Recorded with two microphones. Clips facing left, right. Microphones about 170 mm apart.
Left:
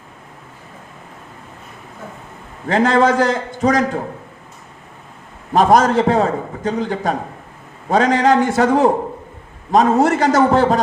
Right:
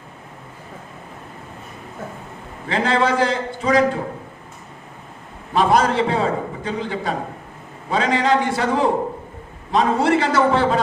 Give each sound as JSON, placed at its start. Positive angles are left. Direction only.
{"t": 2.6, "sound": "a man's voice", "side_deg": 45}
{"t": 5.5, "sound": "a man's voice", "side_deg": 45}